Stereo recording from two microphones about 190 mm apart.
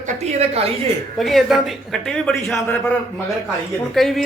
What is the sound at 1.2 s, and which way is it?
Speech, centre (ahead or behind).